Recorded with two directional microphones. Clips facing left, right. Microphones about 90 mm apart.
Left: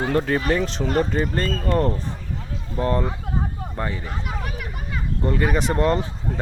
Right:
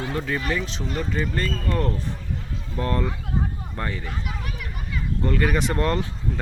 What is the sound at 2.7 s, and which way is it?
Speech, 25° left (ahead or behind).